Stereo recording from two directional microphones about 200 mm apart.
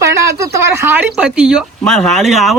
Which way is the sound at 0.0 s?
15° right (ahead or behind).